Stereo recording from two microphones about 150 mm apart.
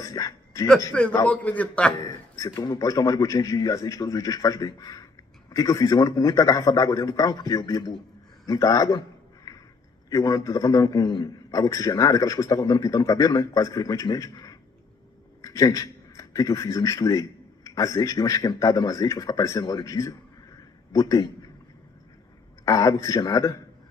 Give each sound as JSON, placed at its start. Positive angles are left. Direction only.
{"t": 0.0, "sound": "music", "side_deg": 25}
{"t": 1.2, "sound": "a man's voice", "side_deg": 10}
{"t": 2.0, "sound": "a man's voice", "side_deg": 25}
{"t": 8.5, "sound": "a sound", "side_deg": 25}
{"t": 10.0, "sound": "a man's voice", "side_deg": 25}
{"t": 22.7, "sound": "a man's voice", "side_deg": 20}